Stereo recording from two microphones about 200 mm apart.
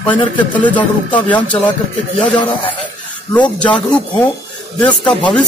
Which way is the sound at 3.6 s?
5° left (ahead or behind).